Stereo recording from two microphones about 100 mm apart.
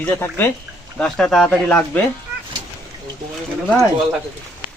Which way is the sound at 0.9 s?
5° left (ahead or behind).